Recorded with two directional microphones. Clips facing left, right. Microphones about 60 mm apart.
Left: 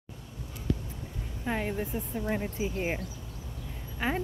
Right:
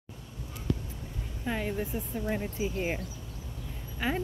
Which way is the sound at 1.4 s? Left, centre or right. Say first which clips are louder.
Left 1 dB; left.